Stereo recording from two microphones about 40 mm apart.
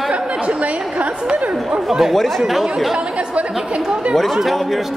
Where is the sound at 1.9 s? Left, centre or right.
Centre.